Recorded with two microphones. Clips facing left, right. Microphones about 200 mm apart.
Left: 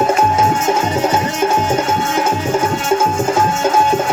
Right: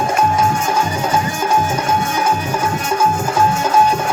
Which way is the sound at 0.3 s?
25° left (ahead or behind).